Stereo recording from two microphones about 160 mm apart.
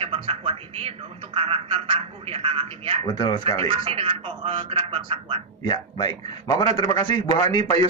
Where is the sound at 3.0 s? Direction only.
30° left (ahead or behind).